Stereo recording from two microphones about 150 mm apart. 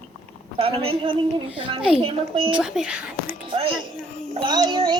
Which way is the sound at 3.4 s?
35° right (ahead or behind).